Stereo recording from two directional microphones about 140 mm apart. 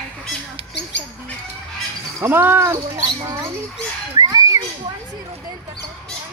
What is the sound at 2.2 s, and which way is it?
Speech, 15° right (ahead or behind).